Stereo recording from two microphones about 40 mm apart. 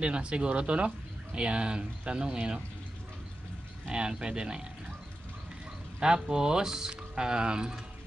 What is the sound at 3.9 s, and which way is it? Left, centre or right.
Speech, right.